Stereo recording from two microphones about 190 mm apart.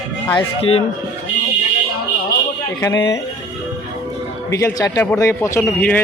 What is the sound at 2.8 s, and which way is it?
Speech, 15° left (ahead or behind).